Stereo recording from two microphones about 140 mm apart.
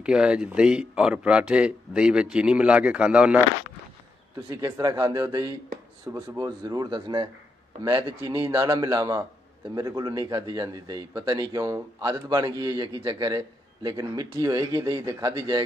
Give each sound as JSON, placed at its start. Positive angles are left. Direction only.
{"t": 0.0, "sound": "speech", "side_deg": -5}
{"t": 4.5, "sound": "speech", "side_deg": -20}